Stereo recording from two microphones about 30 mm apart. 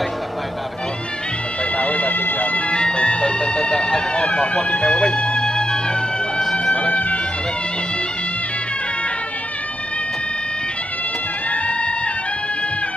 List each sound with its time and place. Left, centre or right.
1.6 s music: left
2.1 s music: left
2.7 s music: left
3.3 s vehicle: left
3.7 s a sound: centre
4.1 s run: left
4.6 s speech: centre
4.8 s music: centre
6.4 s a sound: centre
11.5 s music: left